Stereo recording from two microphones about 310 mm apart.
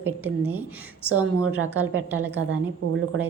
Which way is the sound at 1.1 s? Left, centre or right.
Right.